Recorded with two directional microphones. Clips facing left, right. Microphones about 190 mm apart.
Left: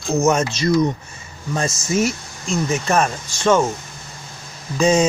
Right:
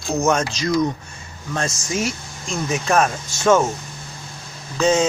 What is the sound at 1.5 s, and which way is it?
Speech, 5° left (ahead or behind).